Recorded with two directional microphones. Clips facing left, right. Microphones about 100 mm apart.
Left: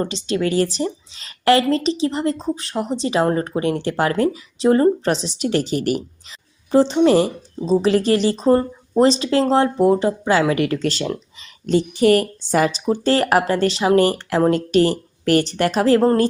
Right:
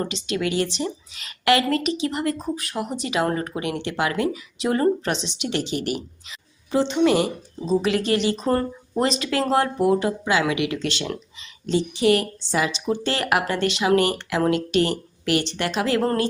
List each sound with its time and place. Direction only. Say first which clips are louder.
0.0 s a woman's voice: left 4 dB; 35° left (ahead or behind)
11.6 s a woman's voice: left 4 dB; 50° left (ahead or behind)